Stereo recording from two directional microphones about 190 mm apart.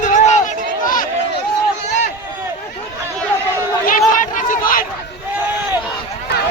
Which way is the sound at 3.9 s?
45° left (ahead or behind).